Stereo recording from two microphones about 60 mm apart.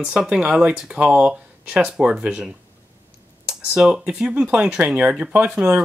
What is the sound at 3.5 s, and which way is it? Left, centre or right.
Speech, centre.